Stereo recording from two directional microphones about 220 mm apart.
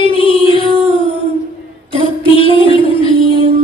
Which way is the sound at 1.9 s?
25° left (ahead or behind).